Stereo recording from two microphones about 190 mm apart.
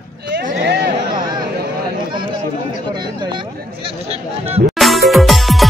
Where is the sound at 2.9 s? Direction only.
25° right (ahead or behind).